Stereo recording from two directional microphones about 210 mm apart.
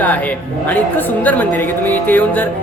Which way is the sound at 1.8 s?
10° left (ahead or behind).